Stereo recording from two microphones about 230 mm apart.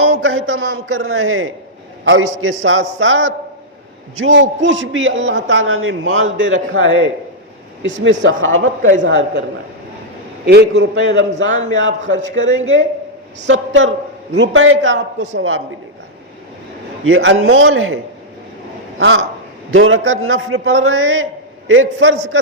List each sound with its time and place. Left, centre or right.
0.0 s a man's voice: right
7.8 s a man's voice: right
10.4 s a man's voice: right
17.1 s a man's voice: right